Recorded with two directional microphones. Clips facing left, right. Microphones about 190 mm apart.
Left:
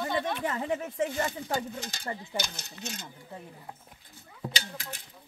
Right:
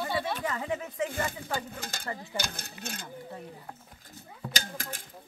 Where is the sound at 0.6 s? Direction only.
40° left (ahead or behind).